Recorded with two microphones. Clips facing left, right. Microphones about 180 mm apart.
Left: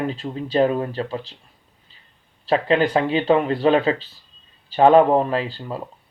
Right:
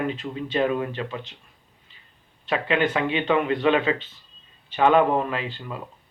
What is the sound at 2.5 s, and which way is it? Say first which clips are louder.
A man's voice: left 5 dB; 35° left (ahead or behind).